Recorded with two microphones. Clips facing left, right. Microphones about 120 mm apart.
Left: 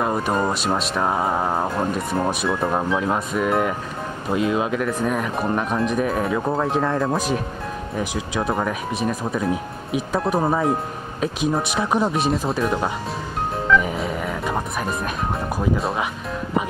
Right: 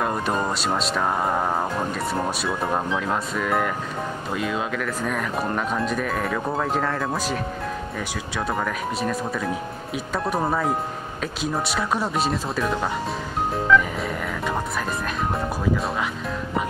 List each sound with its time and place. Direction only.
0.0 s speech: 5° left (ahead or behind)
4.3 s speech: 25° left (ahead or behind)
5.0 s speech: 10° left (ahead or behind)
11.7 s speech: 20° left (ahead or behind)
12.1 s speech: centre (ahead or behind)
13.7 s music: centre (ahead or behind)